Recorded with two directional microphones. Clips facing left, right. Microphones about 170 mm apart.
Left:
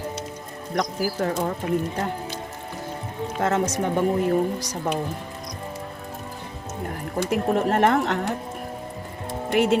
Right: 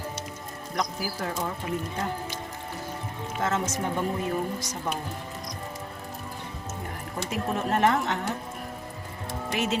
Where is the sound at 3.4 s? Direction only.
60° left (ahead or behind).